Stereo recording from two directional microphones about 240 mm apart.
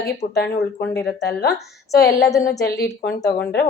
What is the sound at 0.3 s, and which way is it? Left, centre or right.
Speech, left.